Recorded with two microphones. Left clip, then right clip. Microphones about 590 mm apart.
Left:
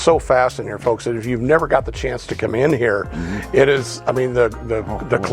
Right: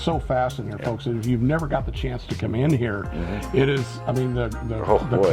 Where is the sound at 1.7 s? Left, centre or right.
Left.